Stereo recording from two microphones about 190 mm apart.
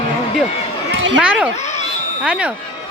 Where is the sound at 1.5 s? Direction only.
35° left (ahead or behind).